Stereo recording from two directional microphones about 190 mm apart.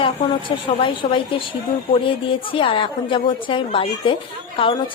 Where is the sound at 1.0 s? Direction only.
30° left (ahead or behind).